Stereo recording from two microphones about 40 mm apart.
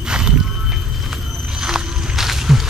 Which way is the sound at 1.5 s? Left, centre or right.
Centre.